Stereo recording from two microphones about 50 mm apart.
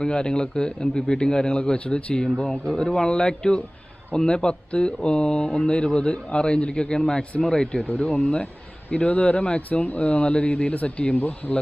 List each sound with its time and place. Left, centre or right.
0.0 s a man's voice: centre
7.9 s speech: left
11.2 s speech: left